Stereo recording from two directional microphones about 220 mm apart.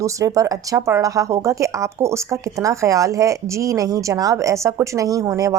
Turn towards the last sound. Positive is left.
turn(degrees=-15)  # may be behind; listen again after turning